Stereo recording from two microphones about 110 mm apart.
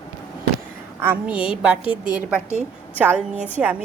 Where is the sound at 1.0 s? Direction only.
15° right (ahead or behind).